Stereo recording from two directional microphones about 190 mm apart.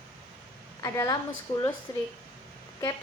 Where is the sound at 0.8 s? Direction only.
15° left (ahead or behind).